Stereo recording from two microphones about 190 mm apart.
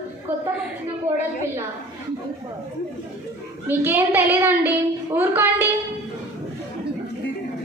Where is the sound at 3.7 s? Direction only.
10° right (ahead or behind).